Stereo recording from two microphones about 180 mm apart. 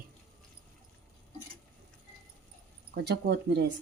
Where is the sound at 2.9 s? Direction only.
65° right (ahead or behind).